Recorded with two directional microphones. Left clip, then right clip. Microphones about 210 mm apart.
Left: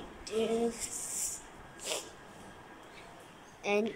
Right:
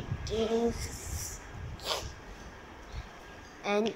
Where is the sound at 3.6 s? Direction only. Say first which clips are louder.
Right 1 dB; 10° left (ahead or behind).